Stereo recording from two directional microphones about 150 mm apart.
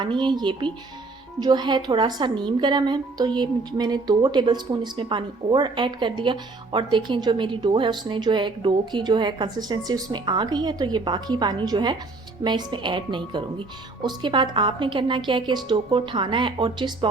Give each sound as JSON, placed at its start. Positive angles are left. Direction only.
{"t": 0.0, "sound": "speech", "side_deg": -30}